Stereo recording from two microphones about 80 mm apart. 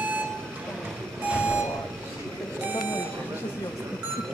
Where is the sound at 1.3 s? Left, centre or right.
Centre.